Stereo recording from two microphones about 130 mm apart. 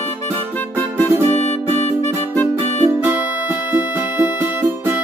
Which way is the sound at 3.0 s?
15° right (ahead or behind).